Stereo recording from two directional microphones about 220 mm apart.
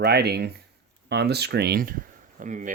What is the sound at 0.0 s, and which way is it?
Speech, 45° right (ahead or behind).